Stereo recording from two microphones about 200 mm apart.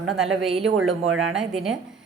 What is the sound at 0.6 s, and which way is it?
Speech, 90° right.